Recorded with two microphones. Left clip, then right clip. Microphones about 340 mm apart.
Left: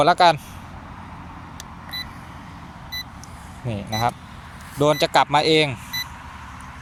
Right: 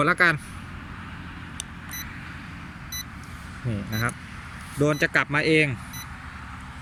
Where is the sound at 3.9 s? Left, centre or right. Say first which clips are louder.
Left 7 dB; left.